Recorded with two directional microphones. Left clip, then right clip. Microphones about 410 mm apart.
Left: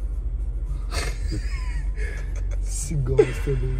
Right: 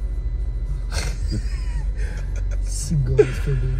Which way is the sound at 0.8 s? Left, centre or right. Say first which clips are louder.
Even; centre.